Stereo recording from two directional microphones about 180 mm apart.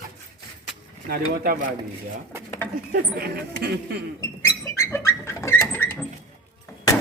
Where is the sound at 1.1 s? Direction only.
55° right (ahead or behind).